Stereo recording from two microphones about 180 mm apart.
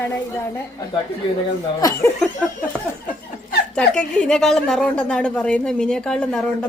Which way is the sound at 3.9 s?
5° left (ahead or behind).